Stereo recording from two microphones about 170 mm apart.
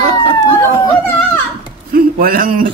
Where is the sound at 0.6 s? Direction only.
15° left (ahead or behind).